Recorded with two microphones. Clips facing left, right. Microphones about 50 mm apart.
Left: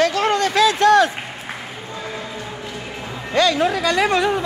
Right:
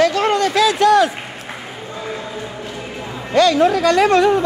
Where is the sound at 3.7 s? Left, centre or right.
Centre.